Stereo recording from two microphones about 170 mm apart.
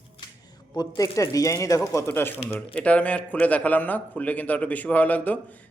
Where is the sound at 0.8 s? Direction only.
20° left (ahead or behind).